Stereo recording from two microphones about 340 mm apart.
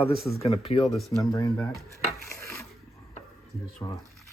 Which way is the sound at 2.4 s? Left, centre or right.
Centre.